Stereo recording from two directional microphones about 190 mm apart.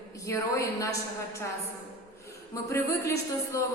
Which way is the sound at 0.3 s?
15° left (ahead or behind).